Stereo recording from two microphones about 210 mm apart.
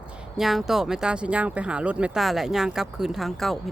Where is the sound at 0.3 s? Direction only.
Centre (ahead or behind).